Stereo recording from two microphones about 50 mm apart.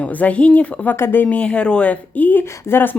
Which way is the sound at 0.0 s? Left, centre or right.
Left.